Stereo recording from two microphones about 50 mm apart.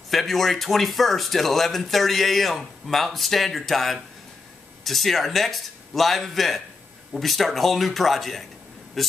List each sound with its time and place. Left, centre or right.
0.1 s speech: centre